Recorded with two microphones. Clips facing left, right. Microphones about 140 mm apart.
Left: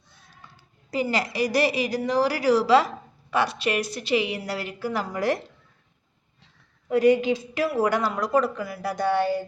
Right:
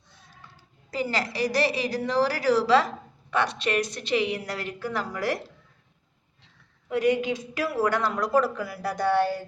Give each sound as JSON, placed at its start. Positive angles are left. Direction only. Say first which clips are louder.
{"t": 0.9, "sound": "a woman's voice", "louder": "left 3 dB", "side_deg": 15}
{"t": 5.1, "sound": "a woman's voice", "louder": "left 5 dB", "side_deg": 20}
{"t": 6.9, "sound": "a woman's voice", "louder": "left 5 dB", "side_deg": 35}
{"t": 7.9, "sound": "a woman's voice", "louder": "left 1 dB", "side_deg": 10}